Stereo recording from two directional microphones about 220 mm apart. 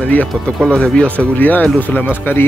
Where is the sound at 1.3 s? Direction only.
10° left (ahead or behind).